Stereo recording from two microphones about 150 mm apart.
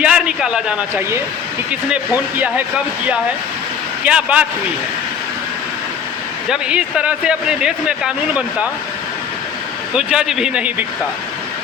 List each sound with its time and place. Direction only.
0.0 s a man's voice: 5° right (ahead or behind)
4.0 s a man's voice: 10° right (ahead or behind)
6.5 s a man's voice: 5° right (ahead or behind)
9.9 s a man's voice: 5° right (ahead or behind)